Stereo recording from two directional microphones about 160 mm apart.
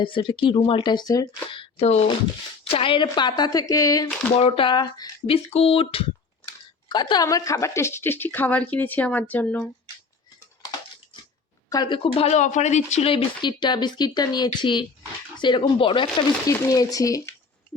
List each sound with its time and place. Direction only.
0.0 s speech: 30° left (ahead or behind)
4.4 s speech: 35° left (ahead or behind)
5.5 s speech: 40° left (ahead or behind); by 9.6 s 10° left (ahead or behind)
11.7 s speech: 30° left (ahead or behind)
16.5 s speech: 20° left (ahead or behind)